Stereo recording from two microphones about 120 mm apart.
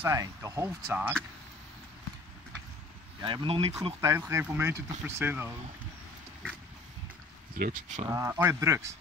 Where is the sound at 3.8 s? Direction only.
25° right (ahead or behind).